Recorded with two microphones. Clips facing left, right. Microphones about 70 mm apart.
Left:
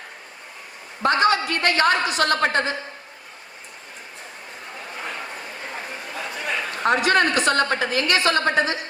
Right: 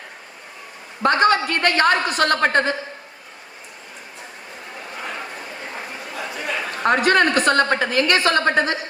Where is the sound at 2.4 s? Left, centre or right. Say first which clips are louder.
Right 3 dB; right.